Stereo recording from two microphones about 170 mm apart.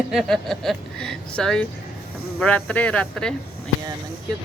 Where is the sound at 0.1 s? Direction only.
Centre (ahead or behind).